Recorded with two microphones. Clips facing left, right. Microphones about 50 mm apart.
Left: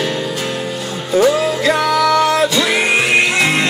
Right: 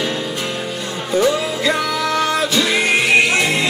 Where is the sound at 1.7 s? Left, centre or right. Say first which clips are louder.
Left 4 dB; centre.